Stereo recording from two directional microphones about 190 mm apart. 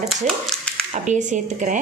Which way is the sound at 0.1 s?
5° left (ahead or behind).